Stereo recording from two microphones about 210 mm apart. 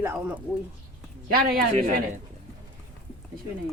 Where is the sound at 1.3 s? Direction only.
45° right (ahead or behind).